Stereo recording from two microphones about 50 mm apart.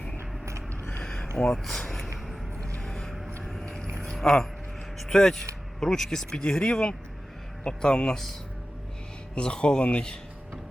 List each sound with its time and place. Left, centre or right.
0.7 s a sound: left
1.0 s a sound: centre
1.4 s speech: centre
2.8 s vehicle: centre
3.9 s boat: centre
5.0 s speech: centre
9.3 s speech: centre